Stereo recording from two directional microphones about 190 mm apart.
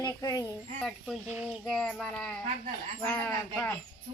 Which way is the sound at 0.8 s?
Centre (ahead or behind).